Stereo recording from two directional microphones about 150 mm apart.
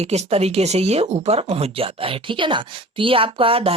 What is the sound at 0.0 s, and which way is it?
Speech, 45° right (ahead or behind).